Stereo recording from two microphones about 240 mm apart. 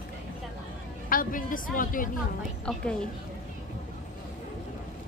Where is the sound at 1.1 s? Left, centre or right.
Left.